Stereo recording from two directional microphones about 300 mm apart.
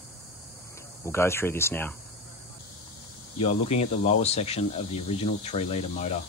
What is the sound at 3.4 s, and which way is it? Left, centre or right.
Speech, left.